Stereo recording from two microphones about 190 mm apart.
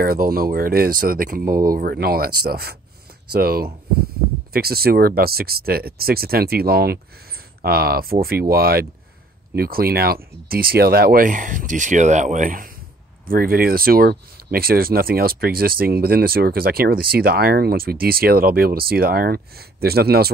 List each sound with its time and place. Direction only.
0.0 s speech: 50° right (ahead or behind)